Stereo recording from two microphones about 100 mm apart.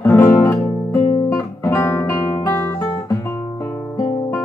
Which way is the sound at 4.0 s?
25° left (ahead or behind).